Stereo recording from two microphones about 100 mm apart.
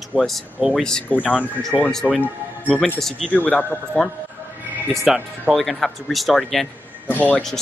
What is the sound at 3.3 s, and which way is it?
Speech, 15° left (ahead or behind).